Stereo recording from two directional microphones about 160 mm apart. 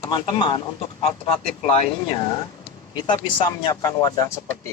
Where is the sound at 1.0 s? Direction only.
40° left (ahead or behind).